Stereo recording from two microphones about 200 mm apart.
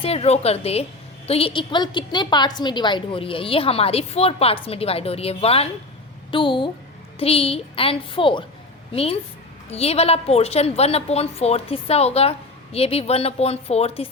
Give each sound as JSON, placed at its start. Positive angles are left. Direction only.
{"t": 0.0, "sound": "a woman's voice", "side_deg": 30}